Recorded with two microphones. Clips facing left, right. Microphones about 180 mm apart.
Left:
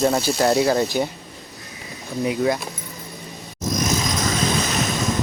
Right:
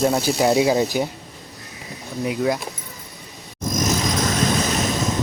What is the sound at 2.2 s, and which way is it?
Speech, centre (ahead or behind).